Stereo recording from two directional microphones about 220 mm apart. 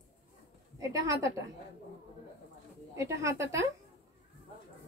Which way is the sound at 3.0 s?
15° right (ahead or behind).